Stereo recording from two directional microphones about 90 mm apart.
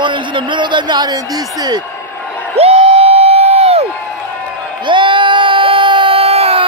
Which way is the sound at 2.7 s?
90° right.